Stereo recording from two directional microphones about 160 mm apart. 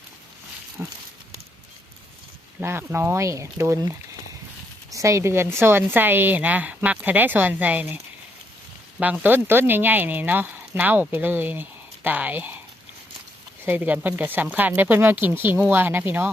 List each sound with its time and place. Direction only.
0.8 s speech: 15° right (ahead or behind)
2.6 s speech: 15° right (ahead or behind)
4.9 s speech: 20° right (ahead or behind)
9.0 s speech: 10° right (ahead or behind)
13.7 s speech: 10° right (ahead or behind)